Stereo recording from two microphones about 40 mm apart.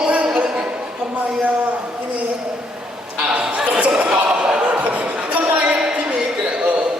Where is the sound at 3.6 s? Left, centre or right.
Right.